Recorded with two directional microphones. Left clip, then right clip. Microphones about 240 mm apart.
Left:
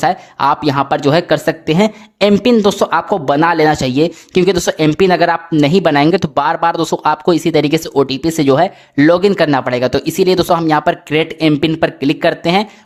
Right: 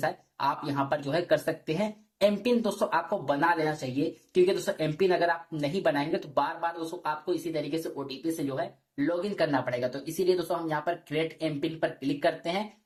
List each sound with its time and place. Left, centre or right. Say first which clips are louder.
0.0 s speech: left 16 dB; left